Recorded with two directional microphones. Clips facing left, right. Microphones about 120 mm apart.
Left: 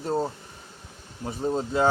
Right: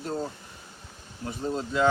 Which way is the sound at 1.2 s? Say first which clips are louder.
Left 3 dB; 25° left (ahead or behind).